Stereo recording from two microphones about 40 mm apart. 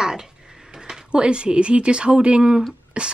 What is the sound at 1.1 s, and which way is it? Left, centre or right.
Speech, right.